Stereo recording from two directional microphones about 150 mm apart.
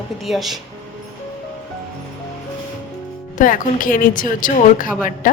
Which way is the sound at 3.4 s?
65° left (ahead or behind).